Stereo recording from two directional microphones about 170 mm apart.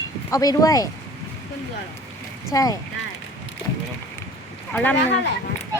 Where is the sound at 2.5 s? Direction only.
20° left (ahead or behind).